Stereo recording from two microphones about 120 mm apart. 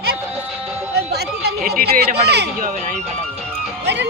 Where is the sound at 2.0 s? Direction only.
65° right (ahead or behind).